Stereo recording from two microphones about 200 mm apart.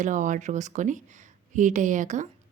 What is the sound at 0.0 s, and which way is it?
A woman's voice, 40° right (ahead or behind).